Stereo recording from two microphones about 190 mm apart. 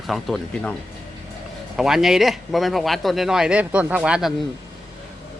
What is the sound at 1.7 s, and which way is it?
Speech, centre (ahead or behind).